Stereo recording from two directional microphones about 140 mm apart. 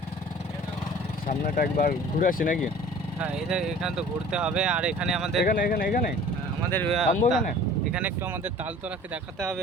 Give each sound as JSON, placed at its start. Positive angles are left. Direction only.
{"t": 1.3, "sound": "speech", "side_deg": 75}
{"t": 3.2, "sound": "speech", "side_deg": -5}
{"t": 5.6, "sound": "speech", "side_deg": 90}
{"t": 6.7, "sound": "speech", "side_deg": 15}
{"t": 6.9, "sound": "speech", "side_deg": 0}